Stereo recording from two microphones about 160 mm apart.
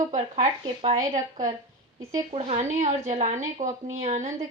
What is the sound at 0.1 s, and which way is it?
Speech, 35° right (ahead or behind).